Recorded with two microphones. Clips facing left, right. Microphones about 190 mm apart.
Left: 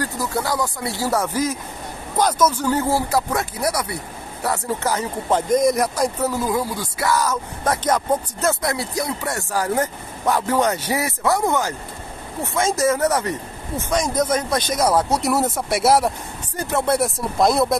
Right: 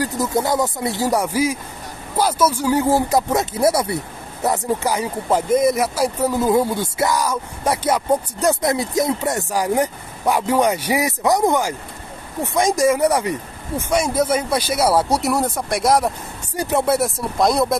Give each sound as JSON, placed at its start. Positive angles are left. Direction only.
{"t": 0.0, "sound": "speech", "side_deg": -20}
{"t": 6.4, "sound": "speech", "side_deg": -25}
{"t": 15.3, "sound": "speech", "side_deg": 5}
{"t": 16.5, "sound": "speech", "side_deg": -15}
{"t": 16.9, "sound": "speech", "side_deg": 0}